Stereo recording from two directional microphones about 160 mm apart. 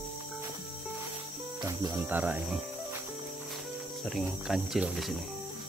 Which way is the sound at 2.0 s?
10° right (ahead or behind).